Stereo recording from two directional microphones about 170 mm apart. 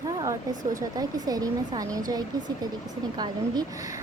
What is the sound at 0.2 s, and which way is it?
A child's voice, 20° right (ahead or behind).